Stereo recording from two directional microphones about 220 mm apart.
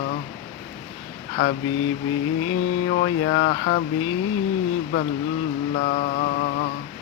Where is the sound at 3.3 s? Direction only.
45° left (ahead or behind).